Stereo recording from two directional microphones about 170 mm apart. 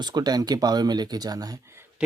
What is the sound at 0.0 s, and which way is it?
Speech, 25° right (ahead or behind).